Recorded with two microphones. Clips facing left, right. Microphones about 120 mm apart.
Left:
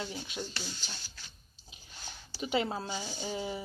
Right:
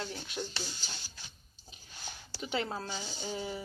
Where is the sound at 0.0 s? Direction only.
5° left (ahead or behind).